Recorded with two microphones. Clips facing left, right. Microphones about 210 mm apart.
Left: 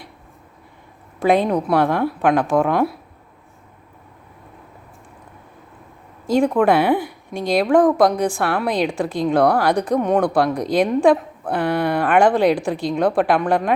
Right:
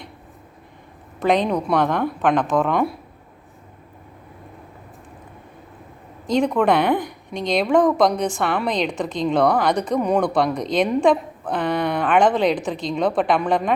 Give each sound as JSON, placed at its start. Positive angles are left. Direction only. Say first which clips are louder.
{"t": 1.2, "sound": "a woman's voice", "louder": "left 2 dB", "side_deg": 10}
{"t": 6.2, "sound": "a woman's voice", "louder": "left 2 dB", "side_deg": 5}